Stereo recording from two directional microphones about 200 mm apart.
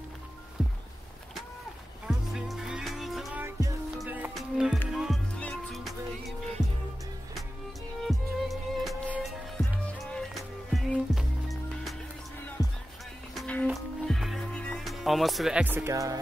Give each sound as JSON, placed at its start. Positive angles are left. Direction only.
{"t": 0.6, "sound": "music", "side_deg": 0}
{"t": 2.0, "sound": "music", "side_deg": 0}
{"t": 8.0, "sound": "music", "side_deg": 0}
{"t": 12.6, "sound": "music", "side_deg": 20}
{"t": 13.3, "sound": "music", "side_deg": 5}